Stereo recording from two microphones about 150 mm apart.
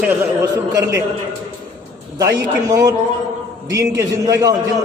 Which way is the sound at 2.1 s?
25° right (ahead or behind).